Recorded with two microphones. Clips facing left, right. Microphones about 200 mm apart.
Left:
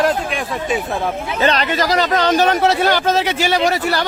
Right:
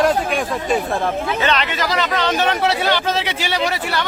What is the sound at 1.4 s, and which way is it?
Speech, 40° left (ahead or behind).